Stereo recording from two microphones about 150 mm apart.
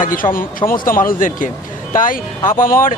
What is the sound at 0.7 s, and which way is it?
A man's voice, 70° left (ahead or behind).